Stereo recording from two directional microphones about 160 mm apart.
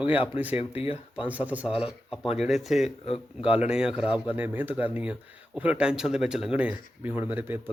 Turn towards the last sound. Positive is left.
turn(degrees=-15)  # may be behind; listen again after turning